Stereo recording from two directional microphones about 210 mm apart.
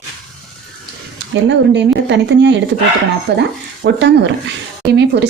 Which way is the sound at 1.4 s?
55° right (ahead or behind).